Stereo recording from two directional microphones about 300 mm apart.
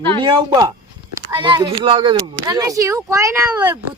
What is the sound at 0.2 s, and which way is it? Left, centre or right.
Speech, centre.